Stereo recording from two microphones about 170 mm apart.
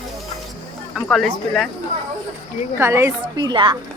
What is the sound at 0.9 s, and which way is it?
Speech, centre (ahead or behind).